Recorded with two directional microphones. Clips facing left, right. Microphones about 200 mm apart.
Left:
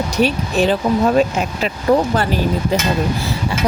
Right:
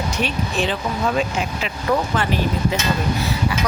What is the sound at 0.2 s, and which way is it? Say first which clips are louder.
Speech: left 8 dB; 40° left (ahead or behind).